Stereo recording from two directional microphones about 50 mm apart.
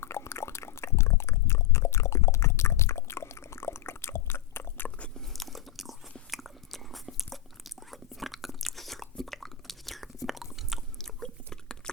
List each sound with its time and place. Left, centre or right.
0.0 s a sound: left
5.1 s biting: centre
10.9 s biting: centre